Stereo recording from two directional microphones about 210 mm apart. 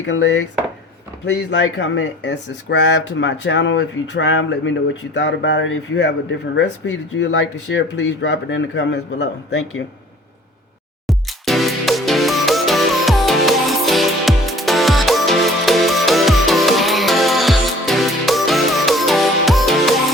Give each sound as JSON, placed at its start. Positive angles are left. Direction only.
{"t": 0.0, "sound": "speech", "side_deg": 60}
{"t": 11.0, "sound": "music", "side_deg": 0}